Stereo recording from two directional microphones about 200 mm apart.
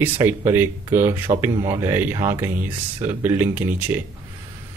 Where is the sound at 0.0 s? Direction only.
10° right (ahead or behind).